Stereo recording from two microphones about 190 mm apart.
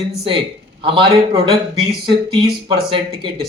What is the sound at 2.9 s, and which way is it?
Speech, 25° right (ahead or behind).